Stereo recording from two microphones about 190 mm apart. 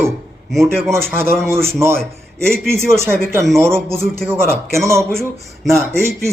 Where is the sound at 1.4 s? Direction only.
15° right (ahead or behind).